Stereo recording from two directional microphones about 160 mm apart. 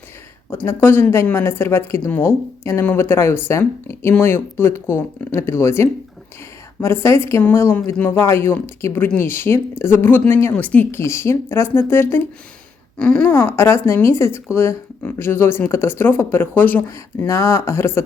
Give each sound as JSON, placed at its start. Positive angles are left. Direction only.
{"t": 0.6, "sound": "a woman's voice", "side_deg": 15}